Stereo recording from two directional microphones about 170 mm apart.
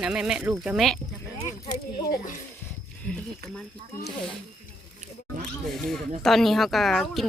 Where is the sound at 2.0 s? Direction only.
65° left (ahead or behind).